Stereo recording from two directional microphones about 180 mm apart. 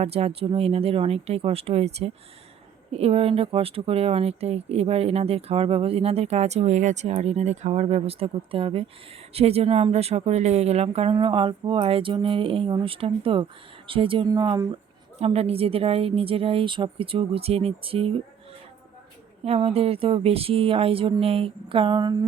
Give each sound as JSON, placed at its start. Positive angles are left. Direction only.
{"t": 0.0, "sound": "speech", "side_deg": -35}
{"t": 15.2, "sound": "speech", "side_deg": -35}
{"t": 19.5, "sound": "speech", "side_deg": -35}